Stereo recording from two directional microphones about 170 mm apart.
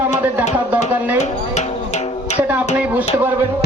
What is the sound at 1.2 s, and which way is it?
Music, 45° left (ahead or behind).